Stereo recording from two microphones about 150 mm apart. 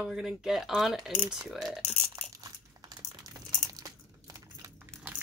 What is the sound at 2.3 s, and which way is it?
Crumpling, 25° right (ahead or behind).